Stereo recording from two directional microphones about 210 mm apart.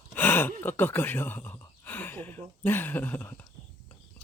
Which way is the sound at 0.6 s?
10° left (ahead or behind).